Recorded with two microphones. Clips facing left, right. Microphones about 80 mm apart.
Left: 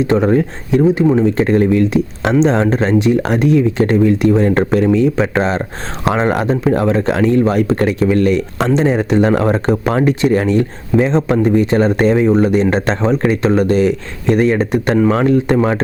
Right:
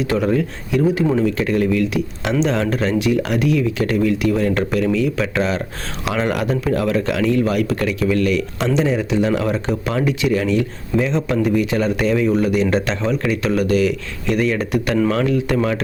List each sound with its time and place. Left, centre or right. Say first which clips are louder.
0.0 s speech: left 5 dB; left